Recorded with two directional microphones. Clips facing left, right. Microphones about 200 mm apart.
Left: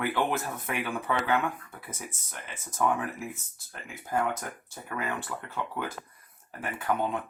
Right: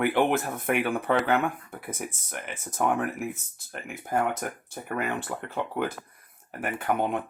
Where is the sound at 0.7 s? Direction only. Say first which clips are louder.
Right 7 dB; 60° right (ahead or behind).